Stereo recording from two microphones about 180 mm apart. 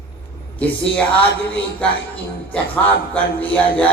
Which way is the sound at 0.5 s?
10° left (ahead or behind).